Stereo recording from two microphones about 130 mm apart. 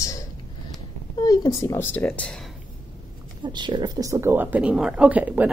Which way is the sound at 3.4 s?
35° right (ahead or behind).